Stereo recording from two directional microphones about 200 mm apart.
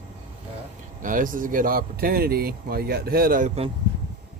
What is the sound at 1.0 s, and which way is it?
Speech, 40° right (ahead or behind).